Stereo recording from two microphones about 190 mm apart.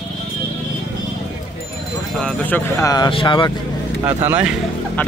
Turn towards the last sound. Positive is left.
turn(degrees=-10)  # may be behind; listen again after turning